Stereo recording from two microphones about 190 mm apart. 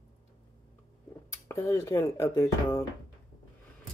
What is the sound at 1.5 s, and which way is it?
Speech, 15° left (ahead or behind).